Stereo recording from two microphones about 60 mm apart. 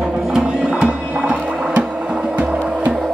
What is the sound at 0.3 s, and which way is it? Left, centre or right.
Music, centre.